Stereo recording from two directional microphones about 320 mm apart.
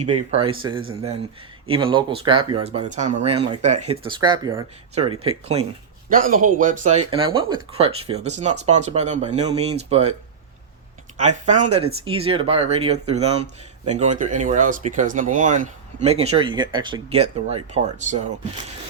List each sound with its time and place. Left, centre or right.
0.0 s speech: centre
11.2 s speech: right